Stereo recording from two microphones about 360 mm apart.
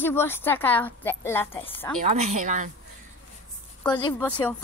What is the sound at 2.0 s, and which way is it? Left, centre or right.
Speech, centre.